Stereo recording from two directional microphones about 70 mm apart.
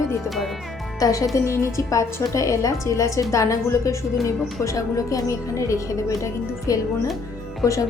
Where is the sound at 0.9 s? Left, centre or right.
Left.